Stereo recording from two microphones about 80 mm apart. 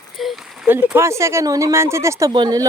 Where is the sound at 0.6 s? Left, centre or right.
Right.